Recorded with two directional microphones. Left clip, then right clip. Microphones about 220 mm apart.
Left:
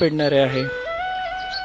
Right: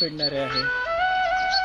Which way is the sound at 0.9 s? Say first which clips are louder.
Right 6 dB; 35° right (ahead or behind).